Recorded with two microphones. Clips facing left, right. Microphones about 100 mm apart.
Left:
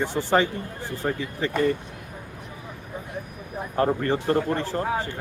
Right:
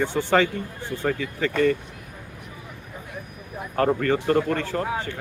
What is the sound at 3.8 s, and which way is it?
Speech, 25° left (ahead or behind).